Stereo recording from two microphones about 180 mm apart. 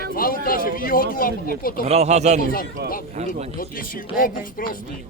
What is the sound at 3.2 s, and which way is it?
Speech, 40° right (ahead or behind).